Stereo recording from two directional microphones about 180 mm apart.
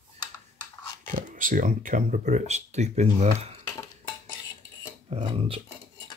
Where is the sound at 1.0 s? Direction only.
50° right (ahead or behind).